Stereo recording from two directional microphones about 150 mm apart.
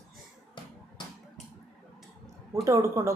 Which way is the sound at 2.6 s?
20° right (ahead or behind).